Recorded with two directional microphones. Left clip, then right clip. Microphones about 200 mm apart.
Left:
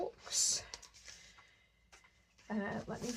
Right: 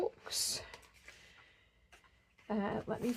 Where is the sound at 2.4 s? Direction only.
55° right (ahead or behind).